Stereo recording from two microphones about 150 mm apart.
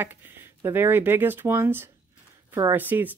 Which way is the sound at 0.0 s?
15° right (ahead or behind).